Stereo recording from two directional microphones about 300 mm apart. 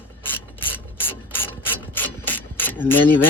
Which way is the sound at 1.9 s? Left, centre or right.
Centre.